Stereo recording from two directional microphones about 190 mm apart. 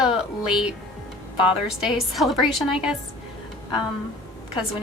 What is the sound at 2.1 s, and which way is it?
Speech, centre (ahead or behind).